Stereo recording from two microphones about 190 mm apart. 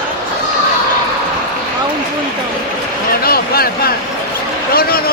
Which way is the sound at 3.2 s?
50° left (ahead or behind).